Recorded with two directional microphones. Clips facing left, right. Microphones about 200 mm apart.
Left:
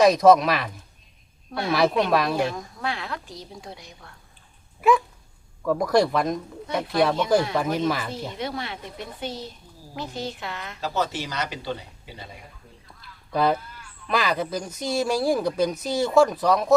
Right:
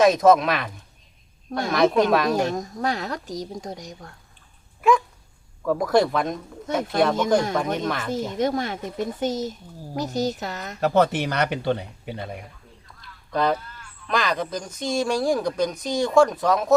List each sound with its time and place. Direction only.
0.0 s speech: centre (ahead or behind)
1.7 s speech: 5° left (ahead or behind)
2.3 s speech: 40° right (ahead or behind)
4.8 s speech: 5° left (ahead or behind)
7.5 s speech: 5° left (ahead or behind)
8.1 s a woman's voice: 45° right (ahead or behind)
10.8 s speech: 60° right (ahead or behind)
13.0 s honk: 5° left (ahead or behind)
14.1 s speech: 5° left (ahead or behind)